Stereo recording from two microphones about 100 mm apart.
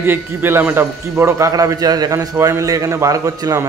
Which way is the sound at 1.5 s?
40° right (ahead or behind).